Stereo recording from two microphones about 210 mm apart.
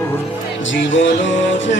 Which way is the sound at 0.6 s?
65° left (ahead or behind).